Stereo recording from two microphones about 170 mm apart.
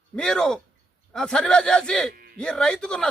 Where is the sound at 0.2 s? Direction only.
5° left (ahead or behind).